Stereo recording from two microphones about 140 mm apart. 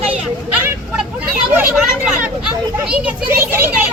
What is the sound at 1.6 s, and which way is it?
Speech, 5° right (ahead or behind).